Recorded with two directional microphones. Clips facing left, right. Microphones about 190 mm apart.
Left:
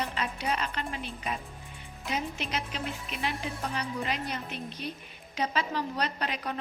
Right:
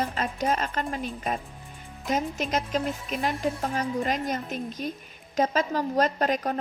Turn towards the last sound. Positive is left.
turn(degrees=-45)  # may be behind; listen again after turning